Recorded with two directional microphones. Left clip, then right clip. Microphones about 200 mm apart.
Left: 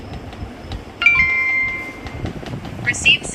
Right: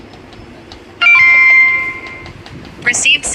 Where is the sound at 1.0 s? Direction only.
50° right (ahead or behind).